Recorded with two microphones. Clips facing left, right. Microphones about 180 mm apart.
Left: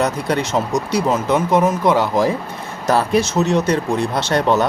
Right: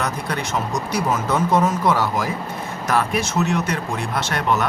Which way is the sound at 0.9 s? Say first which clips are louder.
Left 4 dB; 20° left (ahead or behind).